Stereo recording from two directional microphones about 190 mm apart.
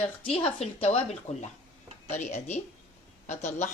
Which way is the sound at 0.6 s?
35° left (ahead or behind).